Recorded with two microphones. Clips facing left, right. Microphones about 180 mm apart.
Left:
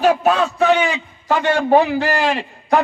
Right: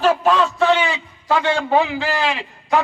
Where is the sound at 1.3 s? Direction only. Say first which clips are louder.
Left 3 dB; 45° left (ahead or behind).